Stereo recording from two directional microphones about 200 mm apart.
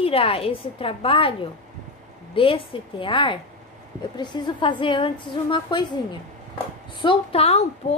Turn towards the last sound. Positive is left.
turn(degrees=25)  # may be behind; listen again after turning